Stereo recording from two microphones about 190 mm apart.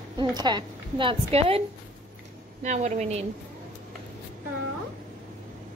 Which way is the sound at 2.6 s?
35° right (ahead or behind).